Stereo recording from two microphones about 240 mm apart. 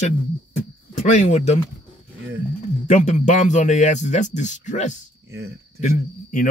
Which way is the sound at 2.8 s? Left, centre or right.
Left.